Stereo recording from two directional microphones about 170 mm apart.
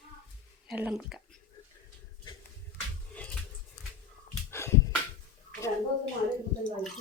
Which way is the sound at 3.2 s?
10° left (ahead or behind).